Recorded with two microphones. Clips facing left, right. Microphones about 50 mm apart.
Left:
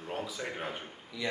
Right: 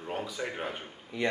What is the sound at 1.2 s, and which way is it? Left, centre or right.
Speech, right.